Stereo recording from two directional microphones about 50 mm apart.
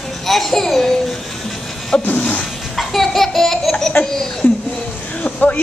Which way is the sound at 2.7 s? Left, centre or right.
Centre.